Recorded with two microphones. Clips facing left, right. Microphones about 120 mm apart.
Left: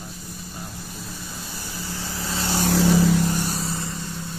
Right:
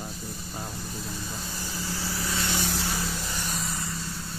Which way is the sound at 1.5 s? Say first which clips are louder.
Left 1 dB; 20° left (ahead or behind).